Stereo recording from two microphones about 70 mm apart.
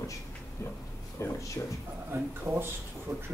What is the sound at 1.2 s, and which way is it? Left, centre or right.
Speech, left.